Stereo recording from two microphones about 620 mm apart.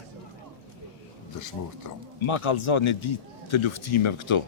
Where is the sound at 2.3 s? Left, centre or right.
Left.